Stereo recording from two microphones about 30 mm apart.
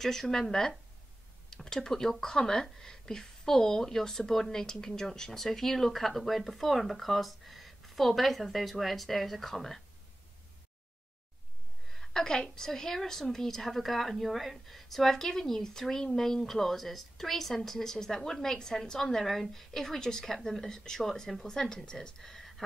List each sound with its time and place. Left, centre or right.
0.0 s speech: centre
12.1 s a woman's voice: left
18.9 s a woman's voice: centre